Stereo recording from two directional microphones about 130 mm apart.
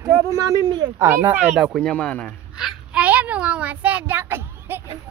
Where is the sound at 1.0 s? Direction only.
20° right (ahead or behind).